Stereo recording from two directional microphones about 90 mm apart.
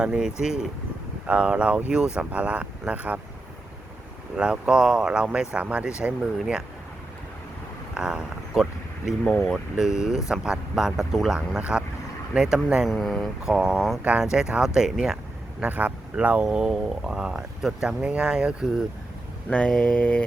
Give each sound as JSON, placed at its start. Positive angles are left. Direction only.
{"t": 0.0, "sound": "speech", "side_deg": -10}
{"t": 4.4, "sound": "speech", "side_deg": -10}
{"t": 7.9, "sound": "speech", "side_deg": -10}
{"t": 12.9, "sound": "speech", "side_deg": 5}
{"t": 15.6, "sound": "speech", "side_deg": -15}
{"t": 19.5, "sound": "mantra", "side_deg": 15}